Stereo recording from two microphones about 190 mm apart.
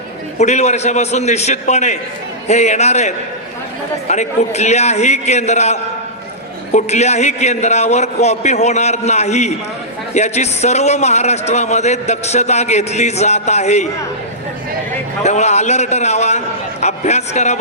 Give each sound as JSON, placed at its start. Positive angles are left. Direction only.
{"t": 0.3, "sound": "a man's voice", "side_deg": 35}
{"t": 4.1, "sound": "a man's voice", "side_deg": 35}
{"t": 15.2, "sound": "a man's voice", "side_deg": 35}